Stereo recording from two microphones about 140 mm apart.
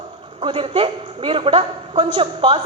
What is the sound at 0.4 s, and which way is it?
A woman's voice, 40° right (ahead or behind).